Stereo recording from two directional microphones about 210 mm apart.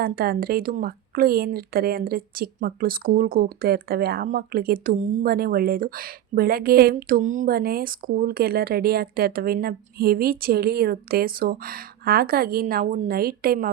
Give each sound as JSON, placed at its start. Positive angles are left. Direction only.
{"t": 0.0, "sound": "speech", "side_deg": -45}